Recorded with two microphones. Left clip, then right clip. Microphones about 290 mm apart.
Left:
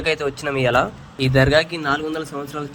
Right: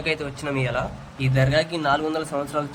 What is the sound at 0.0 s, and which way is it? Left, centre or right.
Speech, centre.